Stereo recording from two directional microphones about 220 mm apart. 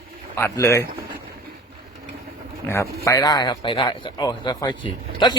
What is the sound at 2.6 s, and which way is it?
A man's voice, 10° left (ahead or behind).